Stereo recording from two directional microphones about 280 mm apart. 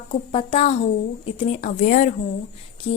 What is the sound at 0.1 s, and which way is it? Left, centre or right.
A woman's voice, centre.